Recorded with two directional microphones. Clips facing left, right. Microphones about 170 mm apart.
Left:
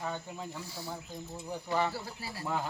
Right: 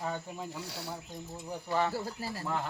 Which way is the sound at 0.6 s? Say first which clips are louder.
Right 2 dB; 75° right (ahead or behind).